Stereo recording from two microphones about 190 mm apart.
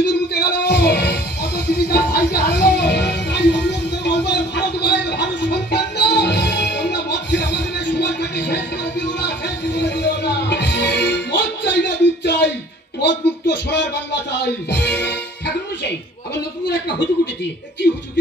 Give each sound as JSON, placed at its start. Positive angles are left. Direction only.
{"t": 0.0, "sound": "music", "side_deg": 65}
{"t": 13.0, "sound": "a sound", "side_deg": 65}
{"t": 14.4, "sound": "speech", "side_deg": 65}